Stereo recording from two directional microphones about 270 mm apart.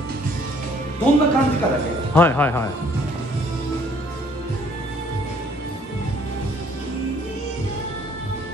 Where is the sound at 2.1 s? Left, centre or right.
Centre.